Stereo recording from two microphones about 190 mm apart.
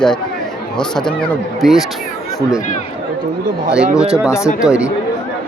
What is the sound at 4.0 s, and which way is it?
Speech, 5° right (ahead or behind).